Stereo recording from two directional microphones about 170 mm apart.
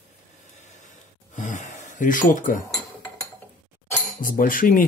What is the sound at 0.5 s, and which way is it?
Gasp, 45° left (ahead or behind).